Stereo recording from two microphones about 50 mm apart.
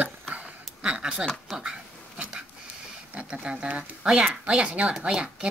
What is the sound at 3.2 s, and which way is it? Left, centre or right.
A woman's voice, right.